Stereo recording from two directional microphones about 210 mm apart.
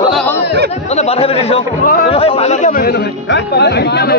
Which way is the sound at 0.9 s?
30° left (ahead or behind).